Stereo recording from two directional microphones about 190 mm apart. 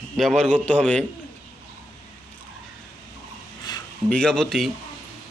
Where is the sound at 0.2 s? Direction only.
Centre (ahead or behind).